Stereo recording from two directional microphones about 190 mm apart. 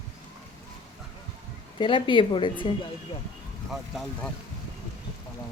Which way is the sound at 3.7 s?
Centre (ahead or behind).